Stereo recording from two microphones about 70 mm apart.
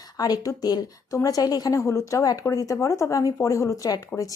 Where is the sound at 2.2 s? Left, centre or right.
Left.